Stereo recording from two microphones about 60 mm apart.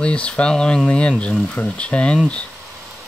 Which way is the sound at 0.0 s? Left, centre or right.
Centre.